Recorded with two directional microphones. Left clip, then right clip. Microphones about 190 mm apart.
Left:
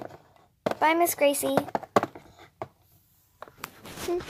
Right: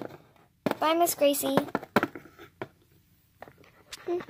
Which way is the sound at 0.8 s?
10° left (ahead or behind).